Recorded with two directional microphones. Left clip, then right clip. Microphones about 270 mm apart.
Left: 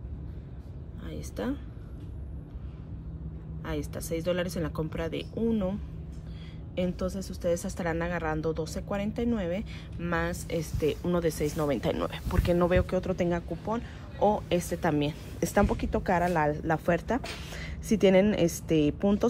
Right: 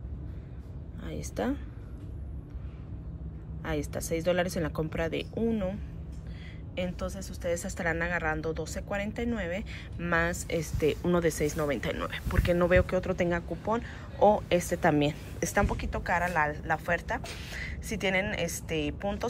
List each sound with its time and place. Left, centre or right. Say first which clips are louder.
1.0 s speech: right 2 dB; centre
3.6 s speech: right 2 dB; centre
15.5 s speech: left 3 dB; centre